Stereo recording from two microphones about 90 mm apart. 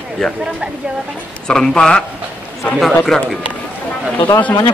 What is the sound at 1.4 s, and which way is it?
A man's voice, 5° left (ahead or behind).